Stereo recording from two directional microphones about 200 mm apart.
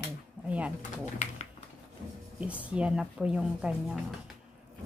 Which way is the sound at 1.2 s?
35° left (ahead or behind).